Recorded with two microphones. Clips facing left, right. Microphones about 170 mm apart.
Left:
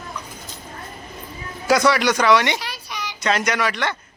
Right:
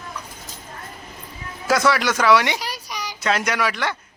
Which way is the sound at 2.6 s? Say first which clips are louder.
Right 1 dB; 40° right (ahead or behind).